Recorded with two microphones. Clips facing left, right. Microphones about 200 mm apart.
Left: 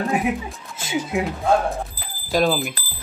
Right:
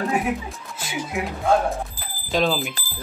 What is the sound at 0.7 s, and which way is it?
Speech, 25° left (ahead or behind).